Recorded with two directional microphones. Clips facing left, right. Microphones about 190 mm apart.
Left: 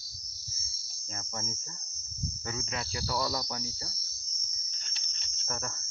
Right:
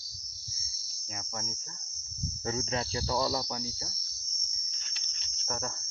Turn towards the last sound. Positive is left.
turn(degrees=-10)  # may be behind; listen again after turning